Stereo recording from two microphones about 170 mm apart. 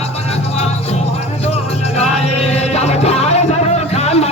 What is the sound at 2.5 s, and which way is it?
Music, 40° left (ahead or behind).